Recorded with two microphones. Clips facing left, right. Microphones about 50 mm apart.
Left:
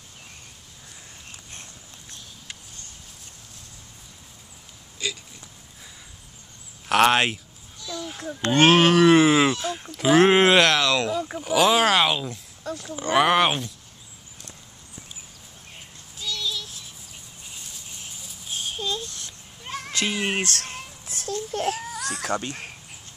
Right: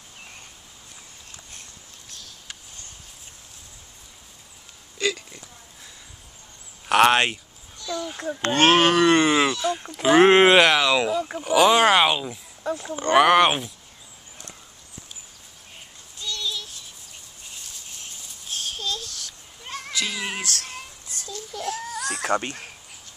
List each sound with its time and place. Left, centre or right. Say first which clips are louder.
4.9 s hiccup: right 6 dB; right
6.9 s a child's voice: right 1 dB; centre
12.6 s speech: right 5 dB; right
13.2 s speech: right 3 dB; centre
16.2 s child singing: even; centre
17.5 s a sound: even; centre; by 19.3 s left
19.6 s goat: left 1 dB; centre
20.1 s a sound: left 4 dB; left
20.4 s speech: left 1 dB; left
21.3 s baby cry: left 5 dB; left
21.8 s baby cry: right 2 dB; centre